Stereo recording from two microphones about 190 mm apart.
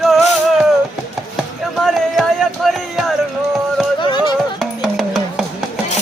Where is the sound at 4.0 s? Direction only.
25° left (ahead or behind).